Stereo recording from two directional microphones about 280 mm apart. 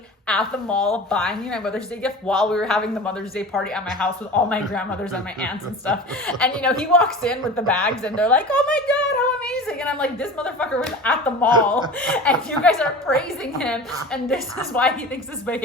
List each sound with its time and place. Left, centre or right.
0.3 s a woman's voice: centre